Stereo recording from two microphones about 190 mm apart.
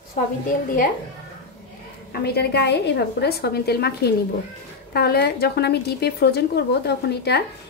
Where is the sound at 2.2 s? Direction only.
60° left (ahead or behind).